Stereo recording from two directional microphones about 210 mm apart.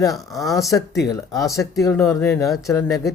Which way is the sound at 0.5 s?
15° left (ahead or behind).